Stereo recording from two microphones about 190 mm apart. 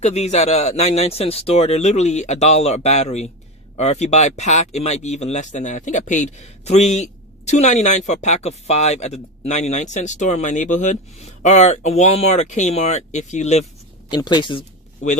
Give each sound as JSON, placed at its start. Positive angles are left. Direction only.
{"t": 0.0, "sound": "speech", "side_deg": 35}
{"t": 14.1, "sound": "speech", "side_deg": 25}